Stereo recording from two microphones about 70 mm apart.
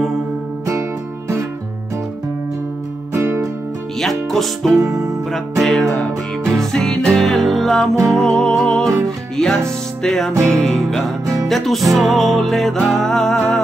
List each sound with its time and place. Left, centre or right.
4.0 s music: centre
4.7 s music: right
5.3 s music: centre
10.0 s music: centre
10.3 s music: right
10.6 s music: centre